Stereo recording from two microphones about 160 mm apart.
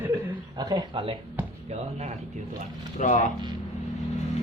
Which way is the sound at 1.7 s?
40° right (ahead or behind).